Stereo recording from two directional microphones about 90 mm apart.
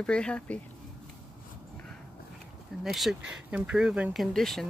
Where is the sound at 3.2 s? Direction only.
15° right (ahead or behind); by 4.7 s 5° left (ahead or behind).